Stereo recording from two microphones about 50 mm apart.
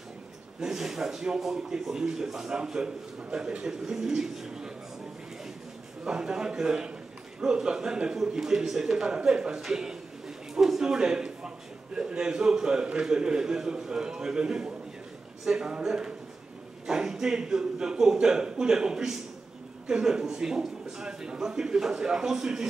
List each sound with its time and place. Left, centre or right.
0.6 s speech: centre
6.0 s speech: centre